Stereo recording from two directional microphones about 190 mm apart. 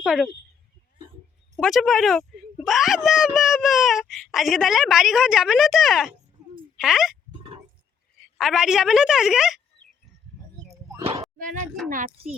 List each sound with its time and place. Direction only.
0.0 s speech: centre (ahead or behind)
1.5 s speech: centre (ahead or behind)
6.4 s a sound: 5° right (ahead or behind)
6.7 s speech: centre (ahead or behind)
8.4 s speech: centre (ahead or behind)
11.9 s a child's voice: 45° right (ahead or behind)